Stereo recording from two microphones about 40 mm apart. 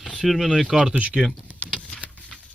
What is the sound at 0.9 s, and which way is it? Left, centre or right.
Speech, right.